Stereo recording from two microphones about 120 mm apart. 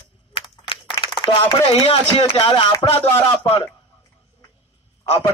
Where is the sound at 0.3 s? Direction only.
45° left (ahead or behind).